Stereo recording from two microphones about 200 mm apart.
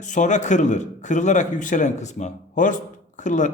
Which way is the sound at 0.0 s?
40° left (ahead or behind).